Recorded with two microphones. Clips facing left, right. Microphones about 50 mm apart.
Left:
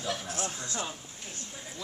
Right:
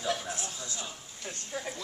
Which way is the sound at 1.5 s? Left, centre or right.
Right.